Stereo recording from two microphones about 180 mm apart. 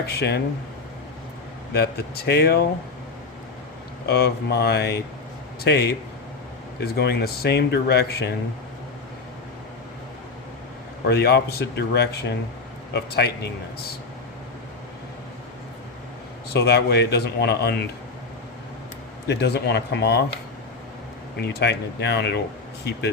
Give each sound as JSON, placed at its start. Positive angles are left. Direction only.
{"t": 0.1, "sound": "speech", "side_deg": 65}
{"t": 1.7, "sound": "speech", "side_deg": 60}
{"t": 4.0, "sound": "speech", "side_deg": 60}
{"t": 11.0, "sound": "speech", "side_deg": 65}
{"t": 16.5, "sound": "speech", "side_deg": 65}
{"t": 19.3, "sound": "speech", "side_deg": 65}
{"t": 21.3, "sound": "speech", "side_deg": 65}